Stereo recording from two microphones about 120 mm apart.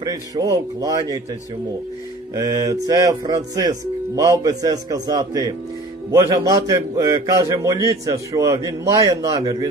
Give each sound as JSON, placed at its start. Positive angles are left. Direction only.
{"t": 0.0, "sound": "speech", "side_deg": -30}
{"t": 2.3, "sound": "a man's voice", "side_deg": -30}